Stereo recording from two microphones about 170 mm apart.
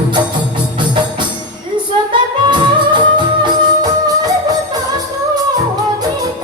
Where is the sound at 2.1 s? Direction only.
30° right (ahead or behind).